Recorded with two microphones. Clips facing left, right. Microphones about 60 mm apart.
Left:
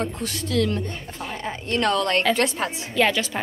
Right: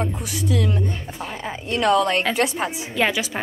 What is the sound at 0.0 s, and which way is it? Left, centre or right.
A woman's voice, centre.